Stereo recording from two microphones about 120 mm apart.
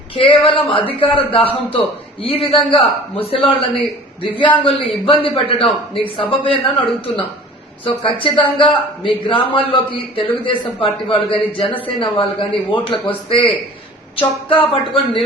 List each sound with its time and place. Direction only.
0.1 s a man's voice: 45° left (ahead or behind)
14.5 s a man's voice: 45° left (ahead or behind)